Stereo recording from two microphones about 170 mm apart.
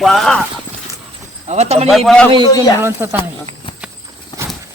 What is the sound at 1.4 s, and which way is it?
Speech, 40° right (ahead or behind).